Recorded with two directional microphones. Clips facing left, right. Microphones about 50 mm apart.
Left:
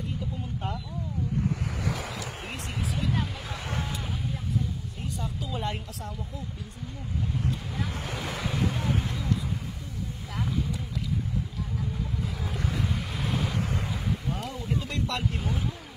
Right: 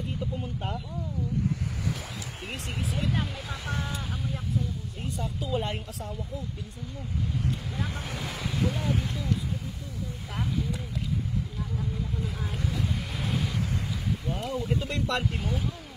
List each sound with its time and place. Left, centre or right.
1.8 s waves: left
5.2 s speech: right
8.2 s speech: left
13.3 s waves: left
14.4 s speech: right